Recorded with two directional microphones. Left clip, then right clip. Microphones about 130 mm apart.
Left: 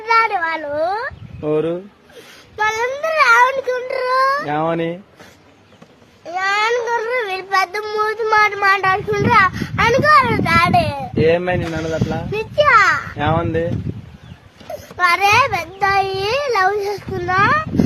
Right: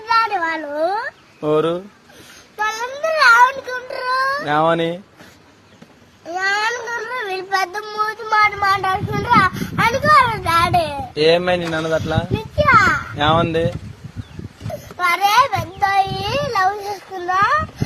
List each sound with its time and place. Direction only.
0.0 s cat: 25° left (ahead or behind)
1.4 s speech: centre (ahead or behind)
2.6 s child singing: 25° left (ahead or behind)
3.8 s a sound: 30° left (ahead or behind)
4.4 s a man's voice: centre (ahead or behind)
6.2 s child singing: 30° left (ahead or behind)
11.2 s a man's voice: centre (ahead or behind)
12.3 s children playing: 35° left (ahead or behind)
13.1 s a man's voice: centre (ahead or behind)
14.9 s child singing: 35° left (ahead or behind)